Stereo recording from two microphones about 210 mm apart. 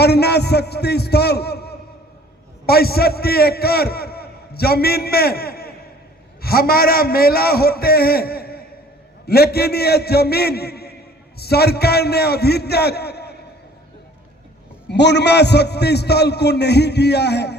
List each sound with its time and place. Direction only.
0.0 s a man's voice: 50° left (ahead or behind)
14.8 s a man's voice: 55° left (ahead or behind)